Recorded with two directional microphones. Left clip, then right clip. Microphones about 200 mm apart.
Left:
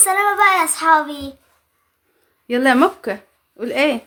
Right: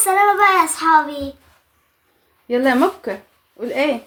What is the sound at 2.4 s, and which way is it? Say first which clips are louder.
A child's voice: left 1 dB; 30° left (ahead or behind).